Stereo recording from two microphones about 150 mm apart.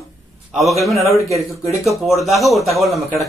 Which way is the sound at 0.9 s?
20° right (ahead or behind).